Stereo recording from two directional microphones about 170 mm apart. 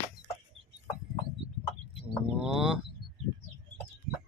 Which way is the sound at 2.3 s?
5° right (ahead or behind).